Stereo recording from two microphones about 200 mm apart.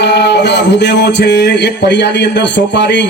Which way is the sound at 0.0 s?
55° left (ahead or behind).